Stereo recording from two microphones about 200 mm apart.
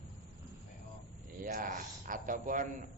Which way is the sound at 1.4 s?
45° right (ahead or behind).